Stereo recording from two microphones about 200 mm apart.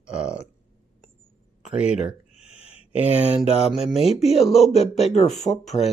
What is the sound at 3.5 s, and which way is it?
Speech, 30° left (ahead or behind).